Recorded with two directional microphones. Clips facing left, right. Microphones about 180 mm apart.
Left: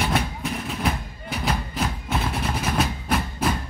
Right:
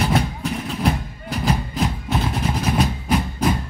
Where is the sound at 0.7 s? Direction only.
Centre (ahead or behind).